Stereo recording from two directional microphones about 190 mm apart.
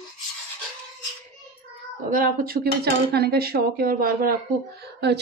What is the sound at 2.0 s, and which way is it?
Speech, 45° right (ahead or behind).